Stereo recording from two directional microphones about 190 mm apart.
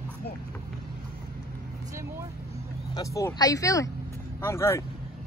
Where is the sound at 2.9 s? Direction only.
15° left (ahead or behind).